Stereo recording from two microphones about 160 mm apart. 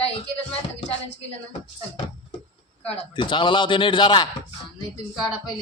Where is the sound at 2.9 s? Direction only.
30° left (ahead or behind).